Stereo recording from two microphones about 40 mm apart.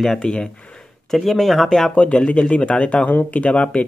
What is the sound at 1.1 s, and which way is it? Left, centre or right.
Speech, centre.